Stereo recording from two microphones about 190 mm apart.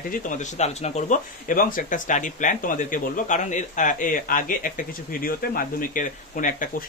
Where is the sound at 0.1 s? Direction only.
40° left (ahead or behind).